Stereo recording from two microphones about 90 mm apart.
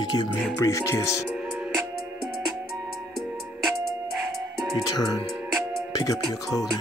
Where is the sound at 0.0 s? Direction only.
55° left (ahead or behind).